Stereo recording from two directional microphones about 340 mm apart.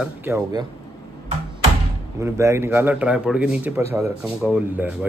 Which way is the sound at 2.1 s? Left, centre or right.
Centre.